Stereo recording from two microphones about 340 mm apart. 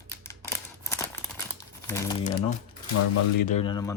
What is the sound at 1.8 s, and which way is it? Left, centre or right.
Crumpling, centre.